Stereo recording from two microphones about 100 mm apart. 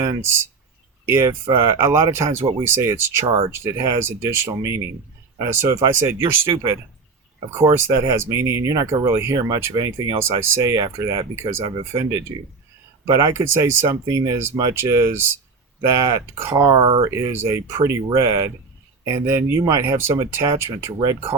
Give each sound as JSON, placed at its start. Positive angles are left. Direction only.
{"t": 1.0, "sound": "speech", "side_deg": -25}
{"t": 3.2, "sound": "speech", "side_deg": -85}
{"t": 3.6, "sound": "speech", "side_deg": -25}
{"t": 16.7, "sound": "speech", "side_deg": -60}
{"t": 17.1, "sound": "speech", "side_deg": -25}